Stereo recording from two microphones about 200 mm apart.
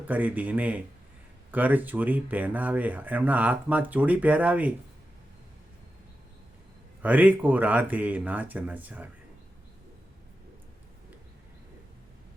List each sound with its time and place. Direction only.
0.1 s speech: 10° right (ahead or behind)
7.0 s speech: 10° right (ahead or behind)